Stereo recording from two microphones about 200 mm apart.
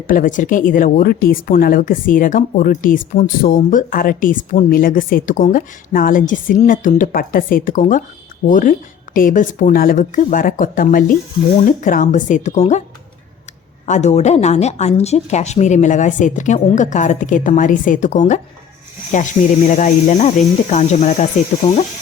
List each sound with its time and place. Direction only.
0.1 s a woman's voice: 40° left (ahead or behind)
13.8 s a woman's voice: 35° left (ahead or behind)